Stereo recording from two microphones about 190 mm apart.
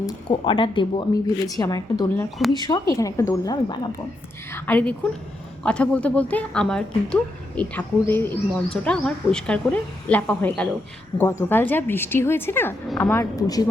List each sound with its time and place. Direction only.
0.0 s speech: 25° left (ahead or behind)